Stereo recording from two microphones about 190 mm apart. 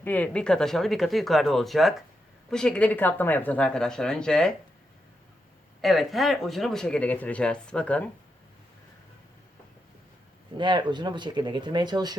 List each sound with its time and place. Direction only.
0.0 s speech: 10° left (ahead or behind)
5.8 s speech: centre (ahead or behind)
10.6 s speech: 25° right (ahead or behind)